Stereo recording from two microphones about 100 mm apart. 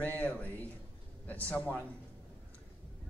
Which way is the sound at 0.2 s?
15° left (ahead or behind).